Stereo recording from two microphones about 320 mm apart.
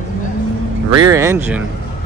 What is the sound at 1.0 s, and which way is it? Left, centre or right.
Speech, centre.